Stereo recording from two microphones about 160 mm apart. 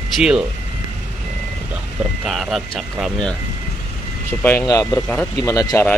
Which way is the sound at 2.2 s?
Centre (ahead or behind).